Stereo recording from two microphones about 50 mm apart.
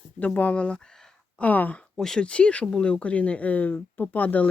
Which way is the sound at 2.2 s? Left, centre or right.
Left.